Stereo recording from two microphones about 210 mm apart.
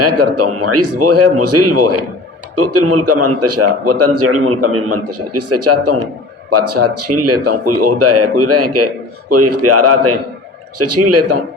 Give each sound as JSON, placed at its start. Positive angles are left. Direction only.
{"t": 0.0, "sound": "a man's voice", "side_deg": -90}